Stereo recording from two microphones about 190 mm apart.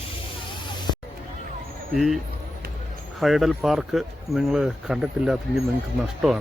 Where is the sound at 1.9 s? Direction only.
Centre (ahead or behind).